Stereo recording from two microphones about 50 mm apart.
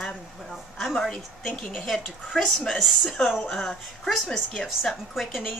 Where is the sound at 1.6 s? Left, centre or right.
Centre.